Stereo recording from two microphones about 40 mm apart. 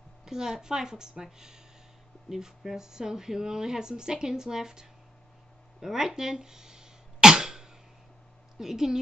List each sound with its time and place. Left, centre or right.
0.2 s speech: centre
5.8 s throat clearing: centre
8.5 s speech: centre